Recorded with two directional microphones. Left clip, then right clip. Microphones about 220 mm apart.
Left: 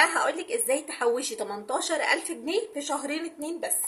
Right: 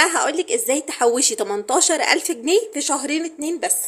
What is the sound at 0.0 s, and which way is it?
A woman's voice, 40° right (ahead or behind).